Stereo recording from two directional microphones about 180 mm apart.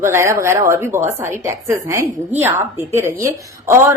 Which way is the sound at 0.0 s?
15° right (ahead or behind).